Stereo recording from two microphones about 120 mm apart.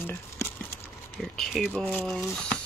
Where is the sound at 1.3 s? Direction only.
Centre (ahead or behind).